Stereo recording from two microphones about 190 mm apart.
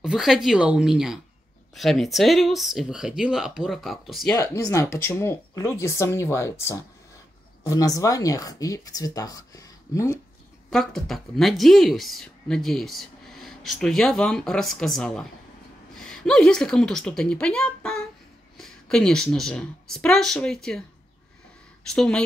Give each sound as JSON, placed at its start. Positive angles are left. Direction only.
{"t": 0.0, "sound": "speech", "side_deg": 0}
{"t": 4.4, "sound": "speech", "side_deg": 15}
{"t": 10.7, "sound": "a woman's voice", "side_deg": 0}
{"t": 21.9, "sound": "speech", "side_deg": 5}